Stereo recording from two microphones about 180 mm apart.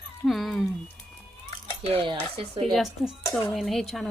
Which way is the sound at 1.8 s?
30° right (ahead or behind).